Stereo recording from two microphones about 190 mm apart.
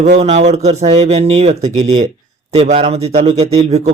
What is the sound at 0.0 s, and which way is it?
Speech, 35° right (ahead or behind).